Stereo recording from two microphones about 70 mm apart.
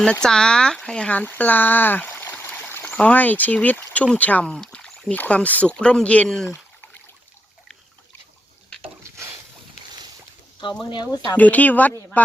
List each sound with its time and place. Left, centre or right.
0.0 s speech: centre; by 2.8 s left
2.8 s speech: centre
4.7 s a sound: centre
5.1 s speech: left
6.5 s a sound: left
10.8 s speech: left
11.3 s speech: left